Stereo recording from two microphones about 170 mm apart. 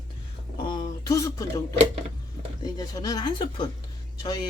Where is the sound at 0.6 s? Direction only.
25° left (ahead or behind).